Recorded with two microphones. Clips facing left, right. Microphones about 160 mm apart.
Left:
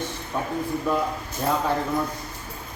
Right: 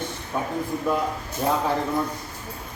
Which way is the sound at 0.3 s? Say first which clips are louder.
Right 1 dB; 5° right (ahead or behind).